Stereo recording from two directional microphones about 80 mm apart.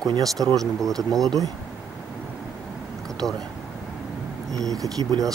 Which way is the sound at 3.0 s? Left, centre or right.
Centre.